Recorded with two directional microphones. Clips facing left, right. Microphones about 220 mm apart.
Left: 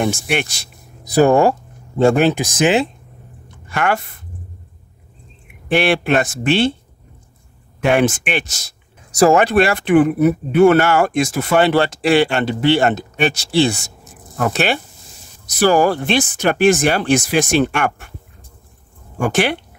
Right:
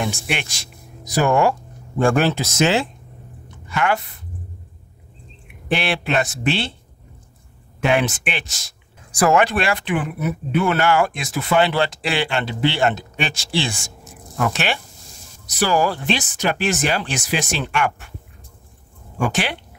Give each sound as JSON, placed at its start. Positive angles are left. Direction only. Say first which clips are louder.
{"t": 0.0, "sound": "speech", "louder": "left 6 dB", "side_deg": 45}
{"t": 1.2, "sound": "speech", "louder": "left 5 dB", "side_deg": 35}
{"t": 2.0, "sound": "speech", "louder": "left 4 dB", "side_deg": 20}
{"t": 3.7, "sound": "speech", "louder": "left 2 dB", "side_deg": 50}
{"t": 5.8, "sound": "speech", "louder": "left 7 dB", "side_deg": 50}
{"t": 7.9, "sound": "speech", "louder": "left 5 dB", "side_deg": 50}
{"t": 9.2, "sound": "speech", "louder": "left 5 dB", "side_deg": 35}
{"t": 15.5, "sound": "speech", "louder": "left 6 dB", "side_deg": 55}
{"t": 19.1, "sound": "speech", "louder": "left 5 dB", "side_deg": 50}